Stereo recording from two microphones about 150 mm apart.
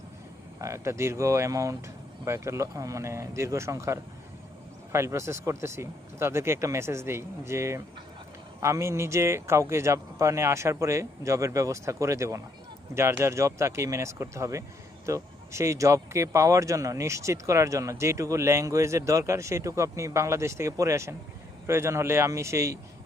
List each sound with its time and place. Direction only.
0.6 s speech: 20° right (ahead or behind)